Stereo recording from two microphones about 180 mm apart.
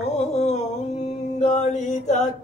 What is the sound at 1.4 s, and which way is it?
Mantra, 40° left (ahead or behind).